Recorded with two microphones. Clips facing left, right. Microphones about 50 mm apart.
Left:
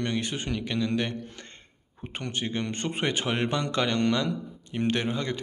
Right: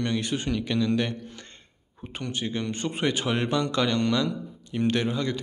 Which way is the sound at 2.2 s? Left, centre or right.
Left.